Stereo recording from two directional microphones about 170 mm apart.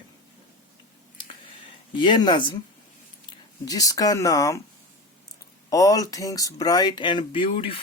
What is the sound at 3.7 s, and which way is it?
Speech, 20° left (ahead or behind).